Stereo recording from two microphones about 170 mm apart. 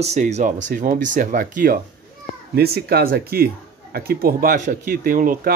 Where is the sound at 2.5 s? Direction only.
65° right (ahead or behind).